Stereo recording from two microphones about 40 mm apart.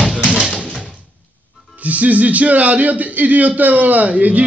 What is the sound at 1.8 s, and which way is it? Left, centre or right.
A man's voice, right.